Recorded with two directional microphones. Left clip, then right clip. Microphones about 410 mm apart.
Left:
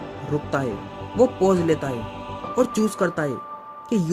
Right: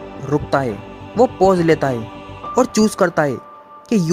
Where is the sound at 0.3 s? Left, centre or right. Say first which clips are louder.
Right 7 dB; centre.